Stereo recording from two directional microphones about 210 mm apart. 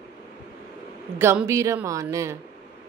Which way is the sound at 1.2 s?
10° right (ahead or behind).